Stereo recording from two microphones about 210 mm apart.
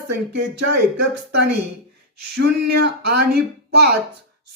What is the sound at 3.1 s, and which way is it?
Speech, 50° right (ahead or behind).